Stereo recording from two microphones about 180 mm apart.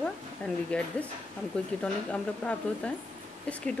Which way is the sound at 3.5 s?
5° left (ahead or behind).